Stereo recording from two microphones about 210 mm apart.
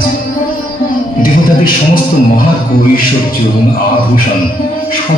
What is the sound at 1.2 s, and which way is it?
Speech, 45° left (ahead or behind).